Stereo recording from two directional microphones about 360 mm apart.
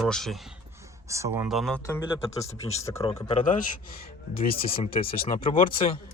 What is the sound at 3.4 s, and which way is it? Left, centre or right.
A man's voice, left.